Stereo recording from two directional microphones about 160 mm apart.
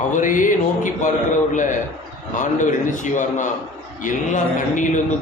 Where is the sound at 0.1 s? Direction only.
55° left (ahead or behind).